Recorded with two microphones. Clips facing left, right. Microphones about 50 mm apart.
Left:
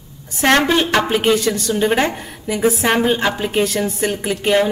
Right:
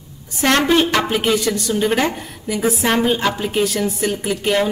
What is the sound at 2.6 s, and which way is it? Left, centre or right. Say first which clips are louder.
A woman's voice: left 2 dB; centre.